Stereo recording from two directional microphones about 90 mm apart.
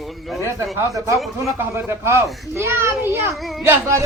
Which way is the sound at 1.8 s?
30° right (ahead or behind).